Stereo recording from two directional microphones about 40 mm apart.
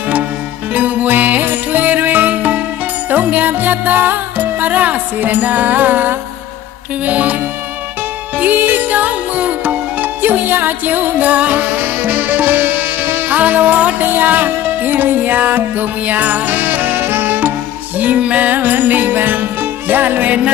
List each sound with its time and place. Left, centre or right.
0.7 s music: right
7.0 s music: right
8.4 s music: right
13.3 s music: right
14.0 s music: right